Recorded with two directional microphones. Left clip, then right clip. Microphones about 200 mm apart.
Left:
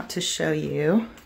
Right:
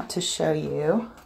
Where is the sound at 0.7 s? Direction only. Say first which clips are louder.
Left 1 dB; 45° left (ahead or behind).